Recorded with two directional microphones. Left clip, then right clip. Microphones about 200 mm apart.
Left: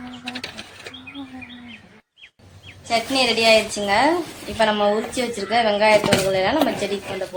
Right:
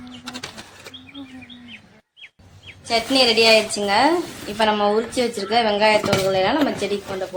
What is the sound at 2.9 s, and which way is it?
A woman's voice, 10° right (ahead or behind).